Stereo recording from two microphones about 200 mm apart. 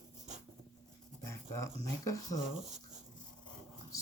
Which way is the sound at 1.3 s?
15° left (ahead or behind).